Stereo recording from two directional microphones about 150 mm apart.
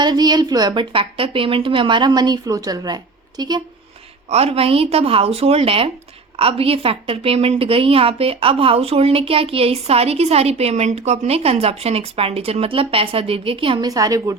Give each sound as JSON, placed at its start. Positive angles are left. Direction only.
{"t": 0.0, "sound": "a woman's voice", "side_deg": -30}
{"t": 4.3, "sound": "a woman's voice", "side_deg": -45}
{"t": 13.8, "sound": "a woman's voice", "side_deg": -25}